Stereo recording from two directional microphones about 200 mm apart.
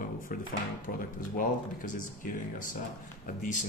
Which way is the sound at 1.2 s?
40° left (ahead or behind).